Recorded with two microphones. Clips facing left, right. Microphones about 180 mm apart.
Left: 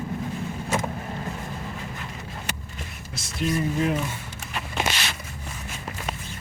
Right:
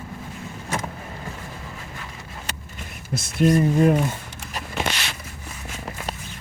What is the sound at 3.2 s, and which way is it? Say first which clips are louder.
Speech: right 8 dB; 50° right (ahead or behind).